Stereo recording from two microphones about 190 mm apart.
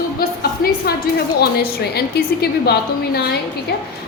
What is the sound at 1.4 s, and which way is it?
A woman's voice, 55° left (ahead or behind).